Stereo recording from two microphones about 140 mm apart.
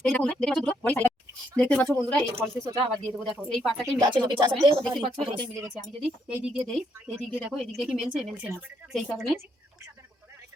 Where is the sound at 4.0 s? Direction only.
30° right (ahead or behind).